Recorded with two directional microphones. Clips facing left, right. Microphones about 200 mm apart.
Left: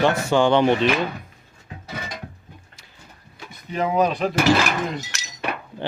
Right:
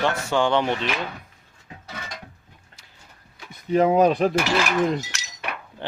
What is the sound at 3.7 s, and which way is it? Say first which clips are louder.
Speech: right 4 dB; 45° right (ahead or behind).